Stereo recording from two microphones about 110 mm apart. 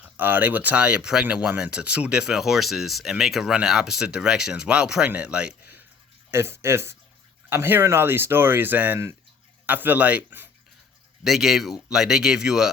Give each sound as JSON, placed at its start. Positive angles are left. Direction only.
{"t": 0.2, "sound": "speech", "side_deg": -15}
{"t": 6.3, "sound": "speech", "side_deg": -25}
{"t": 11.2, "sound": "speech", "side_deg": 0}